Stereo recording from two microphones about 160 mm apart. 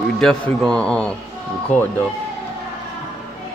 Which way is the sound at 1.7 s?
50° left (ahead or behind).